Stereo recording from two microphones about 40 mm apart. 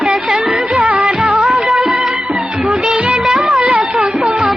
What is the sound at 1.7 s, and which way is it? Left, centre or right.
Music of bollywood, right.